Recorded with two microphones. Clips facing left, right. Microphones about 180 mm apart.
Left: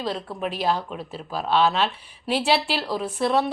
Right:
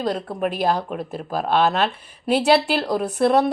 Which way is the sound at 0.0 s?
45° right (ahead or behind).